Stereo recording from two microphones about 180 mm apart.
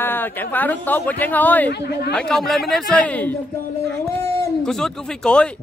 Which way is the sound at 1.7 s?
65° left (ahead or behind).